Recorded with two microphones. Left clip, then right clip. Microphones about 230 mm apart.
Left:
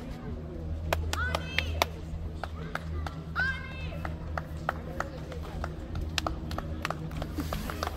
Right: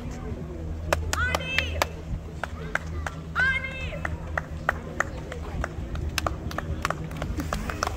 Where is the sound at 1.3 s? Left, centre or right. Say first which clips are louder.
Right 6 dB; right.